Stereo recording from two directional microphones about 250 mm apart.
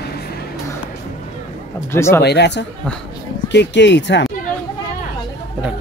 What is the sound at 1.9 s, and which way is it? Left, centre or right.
Speech, centre.